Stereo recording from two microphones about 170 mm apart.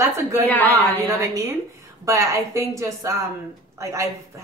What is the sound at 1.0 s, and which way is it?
A woman's voice, 15° right (ahead or behind).